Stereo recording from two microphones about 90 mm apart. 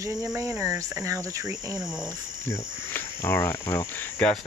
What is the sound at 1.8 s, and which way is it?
Speech, 5° right (ahead or behind).